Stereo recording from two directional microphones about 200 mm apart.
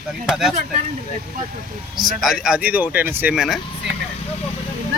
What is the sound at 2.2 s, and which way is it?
Speech, 5° right (ahead or behind).